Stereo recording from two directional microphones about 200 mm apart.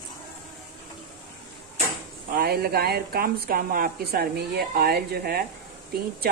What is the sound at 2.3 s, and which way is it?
Speech, 50° right (ahead or behind).